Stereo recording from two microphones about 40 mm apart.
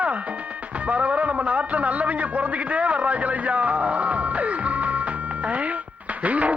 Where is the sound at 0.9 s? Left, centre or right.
Right.